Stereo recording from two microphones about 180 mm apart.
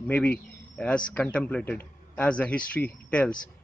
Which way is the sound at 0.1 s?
5° left (ahead or behind).